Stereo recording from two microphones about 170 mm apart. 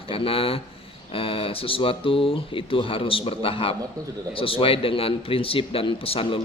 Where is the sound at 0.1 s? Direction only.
35° left (ahead or behind).